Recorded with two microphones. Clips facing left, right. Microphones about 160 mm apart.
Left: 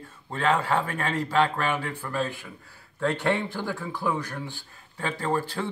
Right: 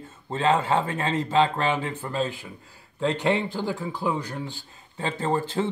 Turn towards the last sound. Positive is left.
turn(degrees=-20)  # may be behind; listen again after turning